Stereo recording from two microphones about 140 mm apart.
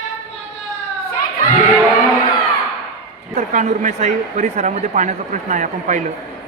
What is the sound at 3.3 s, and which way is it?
Speech, 60° right (ahead or behind).